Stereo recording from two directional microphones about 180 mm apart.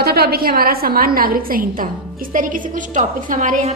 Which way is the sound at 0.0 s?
60° right (ahead or behind).